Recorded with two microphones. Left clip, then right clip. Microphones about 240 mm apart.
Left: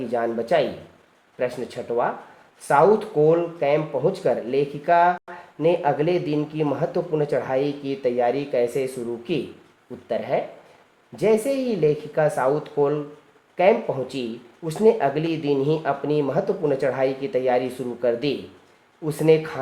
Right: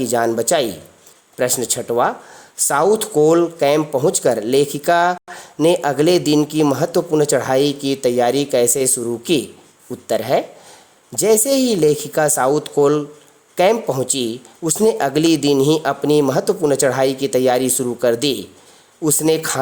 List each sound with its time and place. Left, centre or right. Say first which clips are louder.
0.0 s speech: right 7 dB; right